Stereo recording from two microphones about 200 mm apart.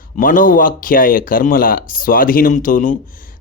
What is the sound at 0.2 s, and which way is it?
Speech, 40° left (ahead or behind).